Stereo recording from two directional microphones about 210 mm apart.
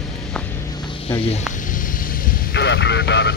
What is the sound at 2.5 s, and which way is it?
Vehicle, 55° left (ahead or behind).